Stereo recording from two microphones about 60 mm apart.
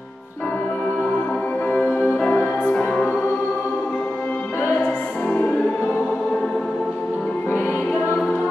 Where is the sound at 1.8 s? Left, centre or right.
Left.